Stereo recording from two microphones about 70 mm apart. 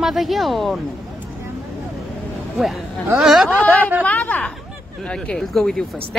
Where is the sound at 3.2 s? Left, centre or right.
Centre.